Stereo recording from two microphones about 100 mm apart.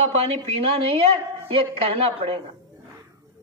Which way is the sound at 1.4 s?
75° right (ahead or behind).